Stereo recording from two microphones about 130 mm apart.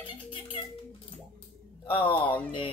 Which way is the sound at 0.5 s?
45° left (ahead or behind).